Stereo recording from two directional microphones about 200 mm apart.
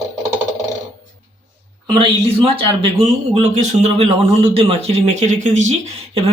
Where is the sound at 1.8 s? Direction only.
25° right (ahead or behind).